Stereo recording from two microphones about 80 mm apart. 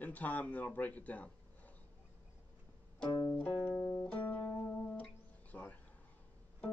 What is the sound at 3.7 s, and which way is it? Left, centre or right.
Music, centre.